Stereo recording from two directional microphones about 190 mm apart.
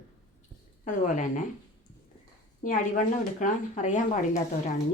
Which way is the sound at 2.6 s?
45° left (ahead or behind).